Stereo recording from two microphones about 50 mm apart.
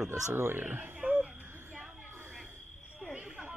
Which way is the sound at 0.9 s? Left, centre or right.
Right.